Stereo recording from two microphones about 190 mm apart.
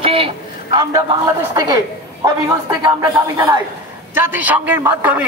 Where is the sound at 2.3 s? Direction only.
20° right (ahead or behind).